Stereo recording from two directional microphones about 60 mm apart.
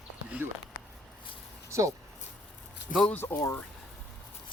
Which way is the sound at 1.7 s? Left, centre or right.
Right.